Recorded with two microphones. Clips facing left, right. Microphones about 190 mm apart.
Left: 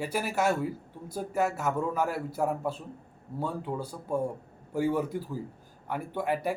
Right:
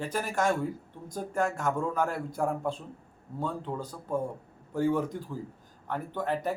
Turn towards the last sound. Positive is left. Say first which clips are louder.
# left 1 dB
turn(degrees=10)  # may be behind; listen again after turning